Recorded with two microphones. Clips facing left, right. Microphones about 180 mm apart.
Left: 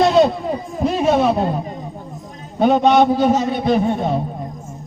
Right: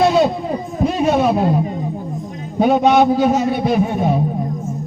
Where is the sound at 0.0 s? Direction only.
5° right (ahead or behind).